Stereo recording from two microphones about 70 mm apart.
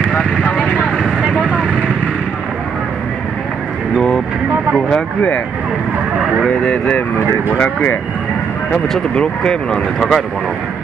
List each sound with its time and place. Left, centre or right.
0.1 s vehicle: left
1.2 s vehicle: centre
6.4 s speech: centre
7.5 s speech: left
8.9 s speech: centre